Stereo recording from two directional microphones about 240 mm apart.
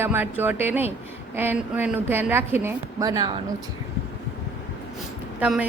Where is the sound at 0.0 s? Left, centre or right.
Centre.